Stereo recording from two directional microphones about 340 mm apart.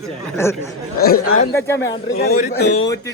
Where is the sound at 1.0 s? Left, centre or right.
Left.